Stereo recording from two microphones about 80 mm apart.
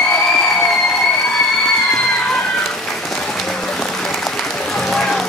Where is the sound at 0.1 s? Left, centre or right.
Centre.